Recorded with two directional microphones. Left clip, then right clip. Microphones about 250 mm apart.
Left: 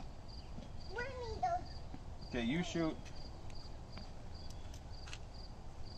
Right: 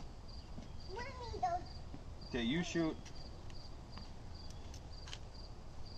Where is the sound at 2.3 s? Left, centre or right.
Centre.